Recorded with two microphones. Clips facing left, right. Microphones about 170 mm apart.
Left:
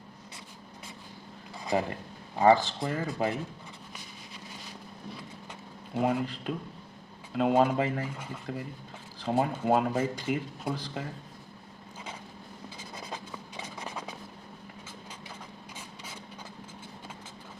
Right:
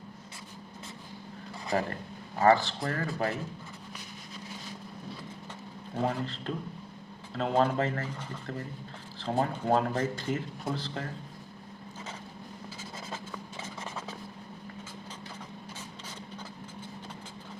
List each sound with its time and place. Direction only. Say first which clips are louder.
1.6 s speech: left 1 dB; 15° left (ahead or behind)
5.9 s speech: left 3 dB; 10° left (ahead or behind)
13.6 s a sound: left 2 dB; 15° left (ahead or behind)